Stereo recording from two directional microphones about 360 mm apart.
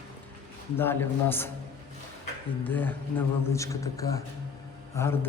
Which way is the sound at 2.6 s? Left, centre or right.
Centre.